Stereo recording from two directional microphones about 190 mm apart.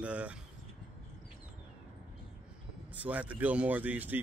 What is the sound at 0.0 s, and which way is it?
Speech, 5° right (ahead or behind).